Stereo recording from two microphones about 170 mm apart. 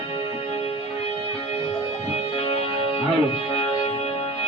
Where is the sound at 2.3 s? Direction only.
35° left (ahead or behind).